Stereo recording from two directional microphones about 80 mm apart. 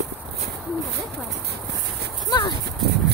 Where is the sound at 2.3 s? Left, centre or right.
Left.